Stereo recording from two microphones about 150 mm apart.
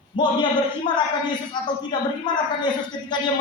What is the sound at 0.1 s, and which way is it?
Speech, 35° left (ahead or behind).